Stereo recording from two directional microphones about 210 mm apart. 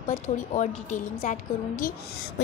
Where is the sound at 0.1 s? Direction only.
35° left (ahead or behind).